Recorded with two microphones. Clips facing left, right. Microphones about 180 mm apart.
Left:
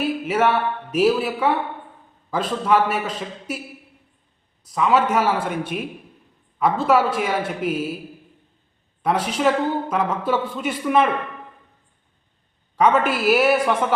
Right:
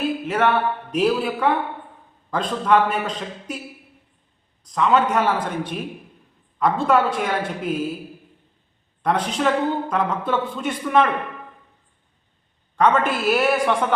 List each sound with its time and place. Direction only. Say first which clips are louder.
0.3 s a man's voice: even; 5° left (ahead or behind)
4.6 s a man's voice: even; 5° left (ahead or behind)
9.0 s a man's voice: left 1 dB; 10° left (ahead or behind)
12.7 s a man's voice: left 1 dB; 5° left (ahead or behind)